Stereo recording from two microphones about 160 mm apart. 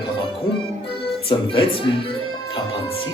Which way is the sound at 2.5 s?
35° left (ahead or behind).